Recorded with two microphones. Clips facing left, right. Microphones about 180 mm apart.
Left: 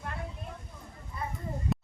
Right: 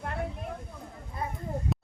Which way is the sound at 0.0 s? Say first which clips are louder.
Right 5 dB; 60° right (ahead or behind).